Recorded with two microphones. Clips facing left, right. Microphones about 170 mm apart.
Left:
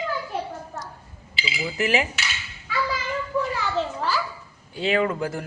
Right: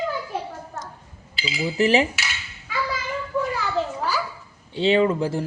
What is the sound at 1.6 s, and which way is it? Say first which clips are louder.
Speech: right 5 dB; 30° right (ahead or behind).